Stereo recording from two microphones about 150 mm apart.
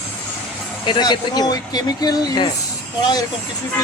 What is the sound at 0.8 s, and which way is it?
Speech, 30° left (ahead or behind).